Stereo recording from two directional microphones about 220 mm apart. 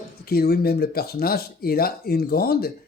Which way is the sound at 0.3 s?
45° left (ahead or behind).